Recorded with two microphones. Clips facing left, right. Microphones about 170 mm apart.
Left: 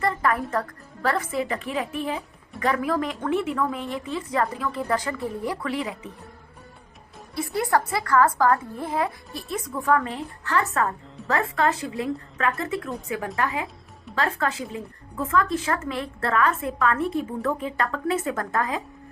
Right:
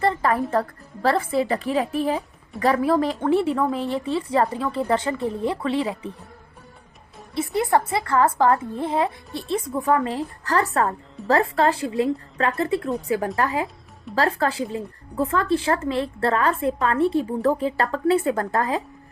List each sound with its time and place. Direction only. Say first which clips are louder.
0.0 s music: right 3 dB; 30° right (ahead or behind)
1.0 s a woman's voice: right 4 dB; 30° right (ahead or behind)
7.3 s a woman's voice: right 3 dB; 25° right (ahead or behind)